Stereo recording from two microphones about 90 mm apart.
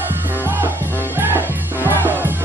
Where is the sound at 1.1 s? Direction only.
20° right (ahead or behind).